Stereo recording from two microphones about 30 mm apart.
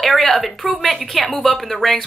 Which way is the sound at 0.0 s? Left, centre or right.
Centre.